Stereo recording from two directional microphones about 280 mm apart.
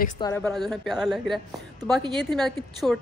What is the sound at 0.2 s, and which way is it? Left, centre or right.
A woman's voice, centre.